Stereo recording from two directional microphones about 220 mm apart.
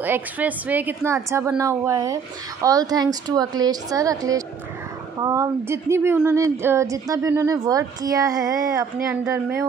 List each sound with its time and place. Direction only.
0.0 s speech: 10° right (ahead or behind)